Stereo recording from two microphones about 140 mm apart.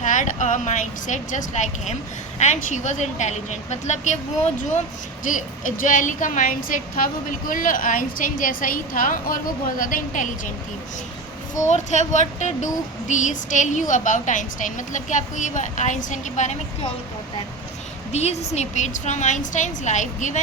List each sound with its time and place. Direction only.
0.0 s speech: 65° left (ahead or behind)
5.2 s a woman's voice: 70° left (ahead or behind)
11.5 s speech: 60° left (ahead or behind)
18.1 s speech: 50° left (ahead or behind)